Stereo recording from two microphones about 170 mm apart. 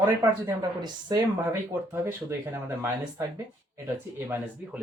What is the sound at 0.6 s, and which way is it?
Speech, 25° right (ahead or behind).